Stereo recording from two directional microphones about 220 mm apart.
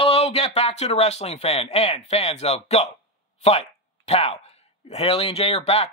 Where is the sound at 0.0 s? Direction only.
25° left (ahead or behind).